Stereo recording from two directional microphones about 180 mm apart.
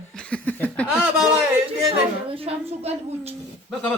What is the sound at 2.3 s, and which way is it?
A woman's voice, 30° right (ahead or behind).